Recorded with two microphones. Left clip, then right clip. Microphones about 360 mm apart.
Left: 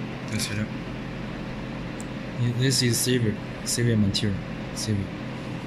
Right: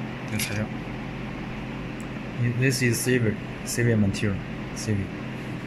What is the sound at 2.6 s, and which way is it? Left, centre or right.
Speech, centre.